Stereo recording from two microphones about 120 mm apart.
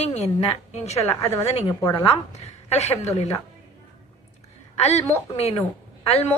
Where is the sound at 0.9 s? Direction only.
20° left (ahead or behind).